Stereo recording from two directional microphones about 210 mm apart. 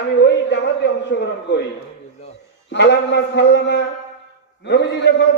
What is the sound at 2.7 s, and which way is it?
A man's voice, 55° left (ahead or behind).